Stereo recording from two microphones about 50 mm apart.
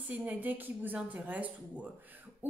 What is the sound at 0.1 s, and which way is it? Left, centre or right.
A woman's voice, right.